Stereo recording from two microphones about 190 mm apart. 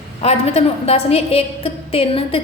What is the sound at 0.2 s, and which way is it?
A woman's voice, 30° left (ahead or behind).